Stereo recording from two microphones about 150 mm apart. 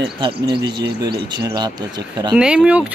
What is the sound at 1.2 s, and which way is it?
Speech, 30° right (ahead or behind).